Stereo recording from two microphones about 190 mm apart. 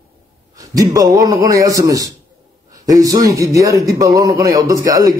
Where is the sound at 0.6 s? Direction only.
20° right (ahead or behind).